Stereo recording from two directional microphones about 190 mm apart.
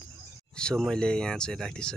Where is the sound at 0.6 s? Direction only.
5° left (ahead or behind).